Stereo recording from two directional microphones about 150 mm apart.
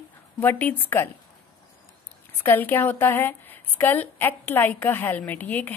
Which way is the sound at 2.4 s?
15° left (ahead or behind).